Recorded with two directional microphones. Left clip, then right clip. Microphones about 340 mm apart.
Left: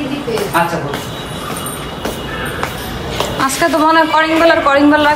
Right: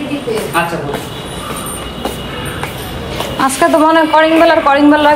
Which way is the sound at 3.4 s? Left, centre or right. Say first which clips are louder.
Right 3 dB; centre.